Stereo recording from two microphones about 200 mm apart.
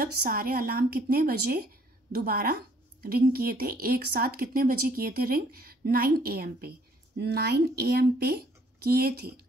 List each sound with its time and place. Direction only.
0.0 s speech: 45° right (ahead or behind)